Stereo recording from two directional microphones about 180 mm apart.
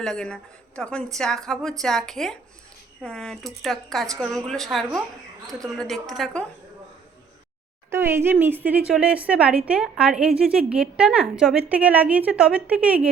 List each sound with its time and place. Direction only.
0.0 s speech: 5° left (ahead or behind)
5.5 s a woman's voice: 20° right (ahead or behind)
5.7 s speech: centre (ahead or behind)
7.9 s speech: 15° right (ahead or behind)